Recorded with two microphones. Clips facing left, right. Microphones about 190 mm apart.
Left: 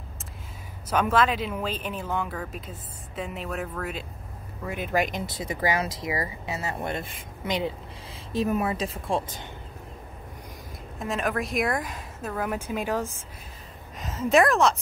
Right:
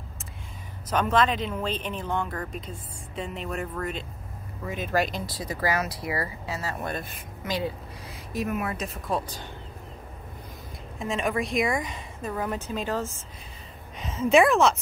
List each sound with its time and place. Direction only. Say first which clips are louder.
0.8 s speech: even; 10° left (ahead or behind)
4.6 s speech: even; 15° left (ahead or behind)
11.0 s speech: right 1 dB; centre (ahead or behind)
13.9 s speech: right 1 dB; centre (ahead or behind)